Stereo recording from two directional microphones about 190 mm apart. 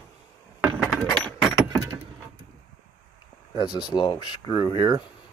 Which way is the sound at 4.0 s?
25° left (ahead or behind).